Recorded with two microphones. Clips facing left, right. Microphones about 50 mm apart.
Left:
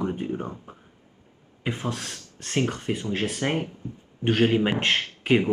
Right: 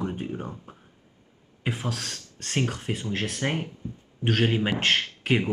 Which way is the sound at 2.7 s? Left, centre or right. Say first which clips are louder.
Left 2 dB; centre.